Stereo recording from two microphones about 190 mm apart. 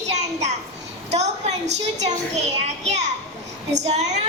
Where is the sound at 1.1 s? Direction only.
35° right (ahead or behind).